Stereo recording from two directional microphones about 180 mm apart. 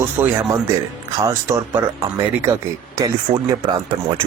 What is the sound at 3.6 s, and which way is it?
Speech, 30° right (ahead or behind).